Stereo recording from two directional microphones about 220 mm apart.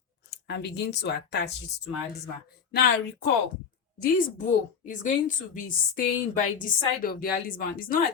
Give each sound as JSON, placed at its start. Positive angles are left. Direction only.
{"t": 0.3, "sound": "speech", "side_deg": 50}